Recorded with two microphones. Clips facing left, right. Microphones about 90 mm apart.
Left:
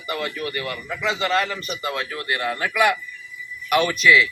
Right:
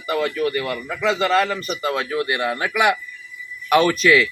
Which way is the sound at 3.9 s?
40° right (ahead or behind).